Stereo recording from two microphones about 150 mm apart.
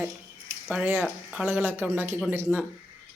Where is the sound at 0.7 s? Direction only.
10° right (ahead or behind).